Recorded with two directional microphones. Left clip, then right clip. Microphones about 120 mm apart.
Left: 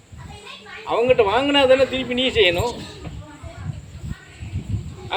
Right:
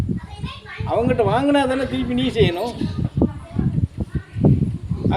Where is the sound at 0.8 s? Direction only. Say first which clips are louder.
Left 2 dB; 25° right (ahead or behind).